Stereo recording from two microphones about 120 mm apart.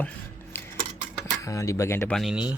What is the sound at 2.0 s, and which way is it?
Speech, 5° left (ahead or behind).